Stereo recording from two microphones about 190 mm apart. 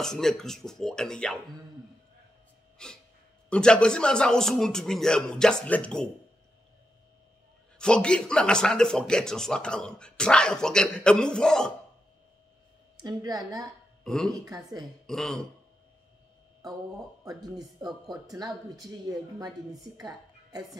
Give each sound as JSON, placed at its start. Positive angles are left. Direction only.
{"t": 0.0, "sound": "speech", "side_deg": 5}
{"t": 2.8, "sound": "speech", "side_deg": 5}
{"t": 7.8, "sound": "speech", "side_deg": 5}
{"t": 12.9, "sound": "speech", "side_deg": -20}
{"t": 14.0, "sound": "speech", "side_deg": 5}
{"t": 14.4, "sound": "a woman's voice", "side_deg": -20}
{"t": 15.0, "sound": "speech", "side_deg": 0}
{"t": 17.2, "sound": "a woman's voice", "side_deg": -20}